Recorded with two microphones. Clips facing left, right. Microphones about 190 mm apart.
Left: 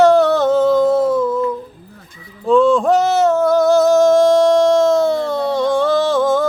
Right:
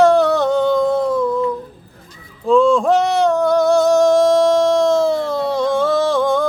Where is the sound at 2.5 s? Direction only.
Centre (ahead or behind).